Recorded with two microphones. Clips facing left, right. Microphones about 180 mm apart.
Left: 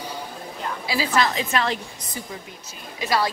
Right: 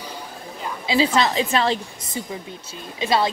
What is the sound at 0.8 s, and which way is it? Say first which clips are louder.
Speech: right 4 dB; 25° right (ahead or behind).